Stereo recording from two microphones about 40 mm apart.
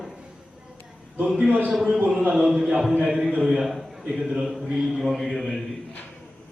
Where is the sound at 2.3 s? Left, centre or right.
Centre.